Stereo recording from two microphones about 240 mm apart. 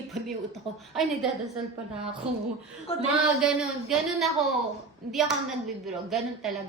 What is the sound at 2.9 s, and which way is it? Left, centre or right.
Speech, left.